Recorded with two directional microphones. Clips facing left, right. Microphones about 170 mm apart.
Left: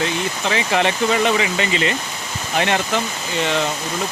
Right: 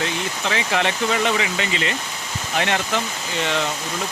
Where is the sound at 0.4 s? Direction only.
25° left (ahead or behind).